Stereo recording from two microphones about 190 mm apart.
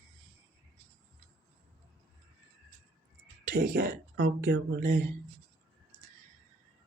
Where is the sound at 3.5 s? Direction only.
55° right (ahead or behind).